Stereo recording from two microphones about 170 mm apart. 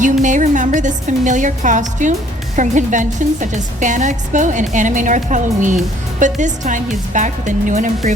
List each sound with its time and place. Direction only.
0.0 s a woman's voice: 45° right (ahead or behind)